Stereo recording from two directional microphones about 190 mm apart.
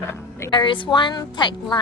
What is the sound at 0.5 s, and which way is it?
A woman's voice, 25° left (ahead or behind).